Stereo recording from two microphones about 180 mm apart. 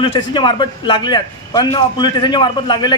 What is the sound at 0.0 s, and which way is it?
A man's voice, 25° left (ahead or behind).